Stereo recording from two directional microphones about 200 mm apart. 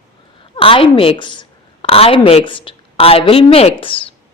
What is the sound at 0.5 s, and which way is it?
A woman's voice, 25° left (ahead or behind).